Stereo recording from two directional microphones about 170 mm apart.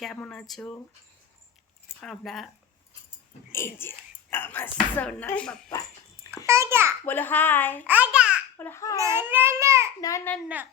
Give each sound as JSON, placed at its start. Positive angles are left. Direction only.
{"t": 0.0, "sound": "speech", "side_deg": 5}
{"t": 2.0, "sound": "speech", "side_deg": 0}
{"t": 3.5, "sound": "speech", "side_deg": 15}
{"t": 6.3, "sound": "speech", "side_deg": -15}
{"t": 7.0, "sound": "speech", "side_deg": 10}
{"t": 7.9, "sound": "a child's voice", "side_deg": -10}
{"t": 8.5, "sound": "a child's voice", "side_deg": 15}
{"t": 9.0, "sound": "speech", "side_deg": -15}
{"t": 10.0, "sound": "a child's voice", "side_deg": 20}